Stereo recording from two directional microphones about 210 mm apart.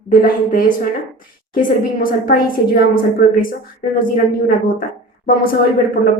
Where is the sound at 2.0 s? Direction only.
45° left (ahead or behind).